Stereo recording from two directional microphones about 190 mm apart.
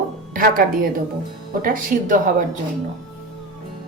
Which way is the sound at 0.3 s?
45° right (ahead or behind).